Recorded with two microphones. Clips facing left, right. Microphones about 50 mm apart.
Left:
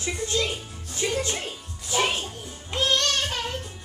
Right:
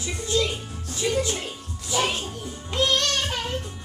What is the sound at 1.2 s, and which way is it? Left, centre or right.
Speech, left.